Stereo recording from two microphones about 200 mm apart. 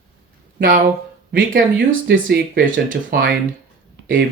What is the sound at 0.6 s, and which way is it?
Speech, 45° right (ahead or behind).